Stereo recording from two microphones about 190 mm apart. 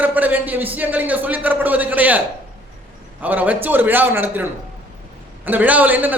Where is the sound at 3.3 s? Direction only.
10° right (ahead or behind).